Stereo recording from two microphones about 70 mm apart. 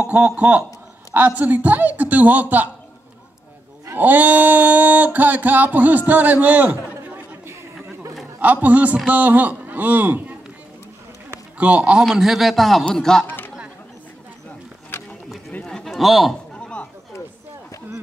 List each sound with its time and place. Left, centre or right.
0.0 s speech: right
3.9 s speech: right
8.4 s speech: right
11.5 s a man's voice: centre
12.1 s speech: centre
15.6 s a sound: centre
16.5 s a sound: centre